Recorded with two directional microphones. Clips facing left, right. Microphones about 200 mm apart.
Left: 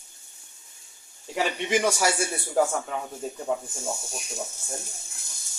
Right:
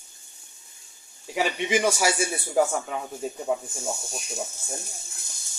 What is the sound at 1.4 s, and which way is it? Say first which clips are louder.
Speech: right 1 dB; 5° right (ahead or behind).